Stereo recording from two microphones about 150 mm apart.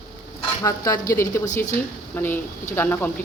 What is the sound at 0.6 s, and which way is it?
Speech, 25° left (ahead or behind).